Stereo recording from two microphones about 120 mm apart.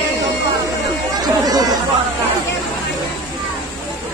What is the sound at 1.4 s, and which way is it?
Chatter, 30° right (ahead or behind).